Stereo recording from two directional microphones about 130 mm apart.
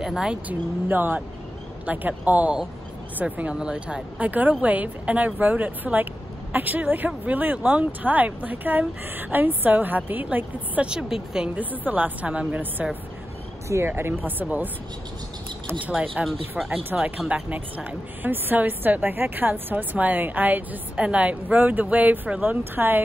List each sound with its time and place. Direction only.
0.0 s a woman's voice: 5° right (ahead or behind)
15.8 s a woman's voice: 10° right (ahead or behind)